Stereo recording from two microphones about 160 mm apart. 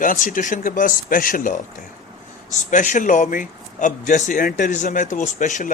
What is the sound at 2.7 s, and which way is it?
A man's voice, 50° left (ahead or behind).